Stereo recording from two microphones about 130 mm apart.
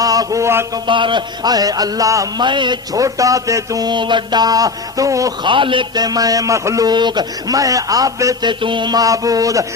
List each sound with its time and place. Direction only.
0.0 s a sound: 30° right (ahead or behind)
0.9 s a man's voice: 40° right (ahead or behind)
2.5 s a man's voice: 35° right (ahead or behind)
5.5 s a man's voice: 40° right (ahead or behind)